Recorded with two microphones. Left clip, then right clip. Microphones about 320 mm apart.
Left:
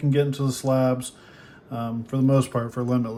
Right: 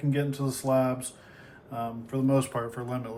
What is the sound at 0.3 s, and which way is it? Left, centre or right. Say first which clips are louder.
Speech: left 4 dB; centre.